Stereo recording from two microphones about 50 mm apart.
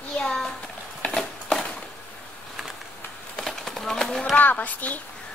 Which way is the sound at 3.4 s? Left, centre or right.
Centre.